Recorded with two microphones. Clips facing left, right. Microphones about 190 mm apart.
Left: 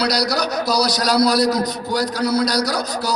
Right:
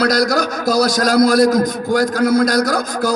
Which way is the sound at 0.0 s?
50° right (ahead or behind).